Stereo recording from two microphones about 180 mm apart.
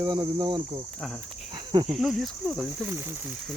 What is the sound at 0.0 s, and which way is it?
Speech, 25° right (ahead or behind).